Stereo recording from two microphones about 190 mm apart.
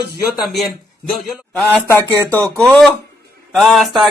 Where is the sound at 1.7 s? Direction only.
10° left (ahead or behind).